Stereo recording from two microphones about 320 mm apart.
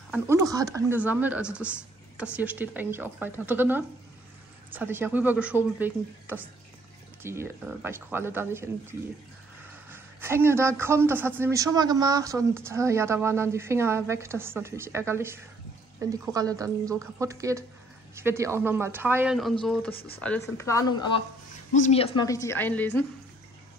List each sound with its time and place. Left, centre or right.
0.1 s speech: centre
19.9 s speech: left
20.2 s a woman's voice: centre